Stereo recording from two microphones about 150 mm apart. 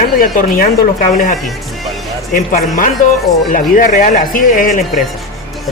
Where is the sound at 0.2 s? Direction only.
75° left (ahead or behind).